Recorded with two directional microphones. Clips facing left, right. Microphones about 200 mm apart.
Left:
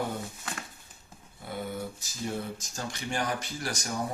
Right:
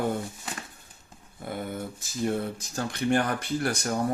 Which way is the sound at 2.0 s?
55° right (ahead or behind).